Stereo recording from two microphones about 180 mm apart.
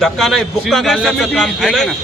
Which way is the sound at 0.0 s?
Centre (ahead or behind).